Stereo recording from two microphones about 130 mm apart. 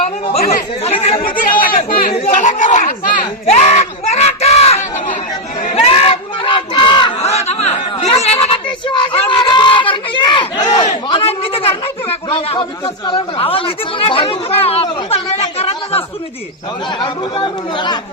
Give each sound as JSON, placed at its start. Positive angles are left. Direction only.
{"t": 0.9, "sound": "speech", "side_deg": 50}
{"t": 1.2, "sound": "chatter", "side_deg": 90}
{"t": 2.1, "sound": "a sound", "side_deg": 65}
{"t": 5.7, "sound": "crowd", "side_deg": 50}
{"t": 7.2, "sound": "snicker", "side_deg": 55}
{"t": 8.9, "sound": "a sound", "side_deg": 45}
{"t": 11.1, "sound": "a man's voice", "side_deg": 50}
{"t": 17.0, "sound": "speech", "side_deg": 40}